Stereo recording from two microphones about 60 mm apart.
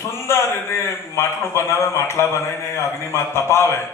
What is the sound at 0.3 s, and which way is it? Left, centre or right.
A man's voice, left.